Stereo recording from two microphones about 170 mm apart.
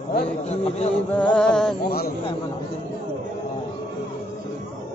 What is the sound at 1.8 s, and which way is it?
Speech, 65° left (ahead or behind).